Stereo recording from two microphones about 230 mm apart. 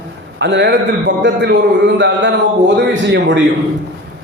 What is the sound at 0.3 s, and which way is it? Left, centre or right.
Speech, right.